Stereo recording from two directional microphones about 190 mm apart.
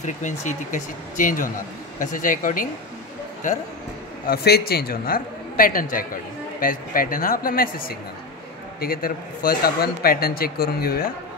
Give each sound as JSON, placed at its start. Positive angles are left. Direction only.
{"t": 0.0, "sound": "a man's voice", "side_deg": 40}
{"t": 4.3, "sound": "a man's voice", "side_deg": 55}
{"t": 8.8, "sound": "a man's voice", "side_deg": 50}